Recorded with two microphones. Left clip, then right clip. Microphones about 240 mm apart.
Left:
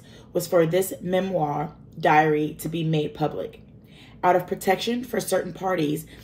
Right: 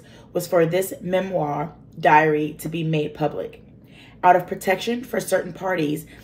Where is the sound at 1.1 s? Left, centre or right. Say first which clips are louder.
Right 2 dB; left.